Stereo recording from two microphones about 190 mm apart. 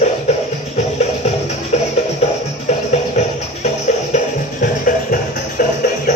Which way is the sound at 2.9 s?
35° left (ahead or behind).